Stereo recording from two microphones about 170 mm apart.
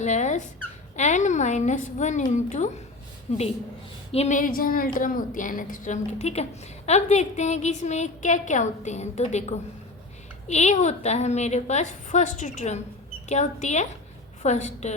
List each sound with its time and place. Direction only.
0.0 s dog: 45° left (ahead or behind)
0.9 s a woman's voice: 45° left (ahead or behind)